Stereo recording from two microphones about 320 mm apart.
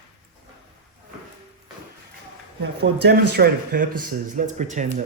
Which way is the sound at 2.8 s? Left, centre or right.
Right.